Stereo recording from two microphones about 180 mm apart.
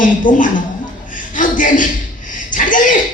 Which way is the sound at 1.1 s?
45° left (ahead or behind).